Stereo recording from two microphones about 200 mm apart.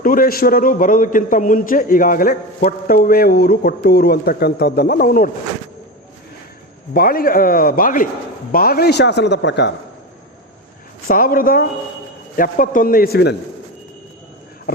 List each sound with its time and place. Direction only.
0.0 s a man's voice: 45° left (ahead or behind)
6.9 s a man's voice: 45° left (ahead or behind)
11.1 s a man's voice: 45° left (ahead or behind)